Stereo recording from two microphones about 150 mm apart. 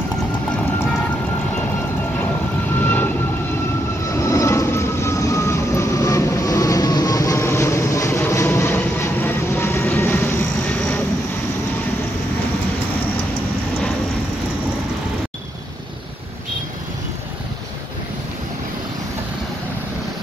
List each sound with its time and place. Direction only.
2.8 s vehicle: 10° left (ahead or behind)
4.2 s vehicle: 20° left (ahead or behind)